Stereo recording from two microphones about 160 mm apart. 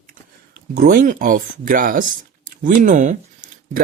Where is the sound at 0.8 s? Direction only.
65° right (ahead or behind).